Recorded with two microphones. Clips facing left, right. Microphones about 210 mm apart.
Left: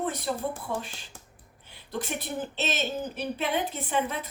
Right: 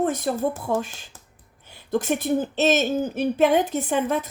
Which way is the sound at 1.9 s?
45° right (ahead or behind).